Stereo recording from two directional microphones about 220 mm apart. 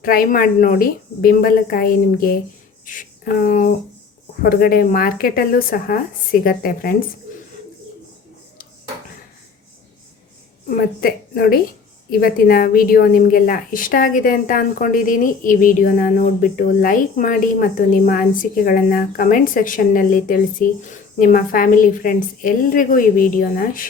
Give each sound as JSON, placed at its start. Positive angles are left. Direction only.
{"t": 0.0, "sound": "a woman's voice", "side_deg": 40}
{"t": 10.8, "sound": "a woman's voice", "side_deg": 45}